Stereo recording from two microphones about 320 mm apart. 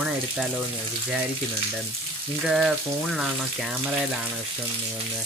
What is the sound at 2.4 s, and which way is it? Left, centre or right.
Frying, centre.